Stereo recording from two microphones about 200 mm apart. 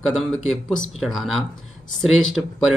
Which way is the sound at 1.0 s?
Centre (ahead or behind).